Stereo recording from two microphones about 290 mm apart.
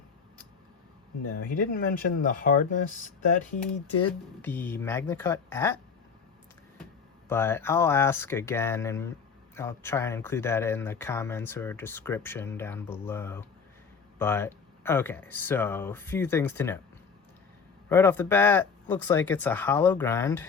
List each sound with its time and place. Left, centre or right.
1.5 s speech: left
4.4 s speech: centre
7.3 s speech: centre
17.8 s speech: centre